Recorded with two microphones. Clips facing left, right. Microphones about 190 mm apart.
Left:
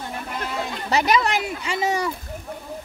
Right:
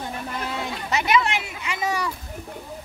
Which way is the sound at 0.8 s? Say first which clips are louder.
Left 2 dB; 35° left (ahead or behind).